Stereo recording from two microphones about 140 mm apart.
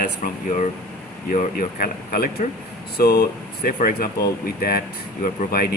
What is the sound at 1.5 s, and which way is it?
Speech, 90° left.